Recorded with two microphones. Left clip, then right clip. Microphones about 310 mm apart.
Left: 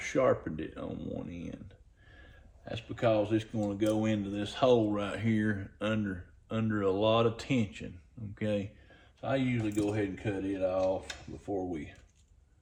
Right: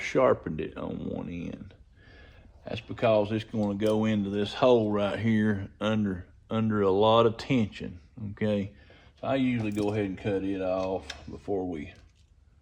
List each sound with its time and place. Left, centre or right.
0.0 s speech: centre